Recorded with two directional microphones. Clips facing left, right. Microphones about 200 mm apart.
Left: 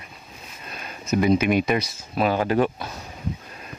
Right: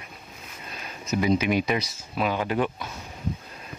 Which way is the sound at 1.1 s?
55° left (ahead or behind).